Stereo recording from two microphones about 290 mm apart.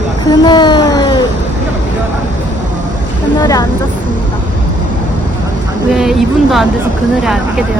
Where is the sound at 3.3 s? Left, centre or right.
Centre.